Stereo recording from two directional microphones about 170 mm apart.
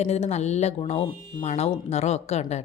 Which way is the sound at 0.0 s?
40° left (ahead or behind).